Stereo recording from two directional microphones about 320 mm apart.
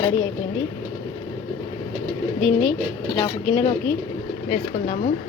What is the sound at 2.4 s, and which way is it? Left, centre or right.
Speech, centre.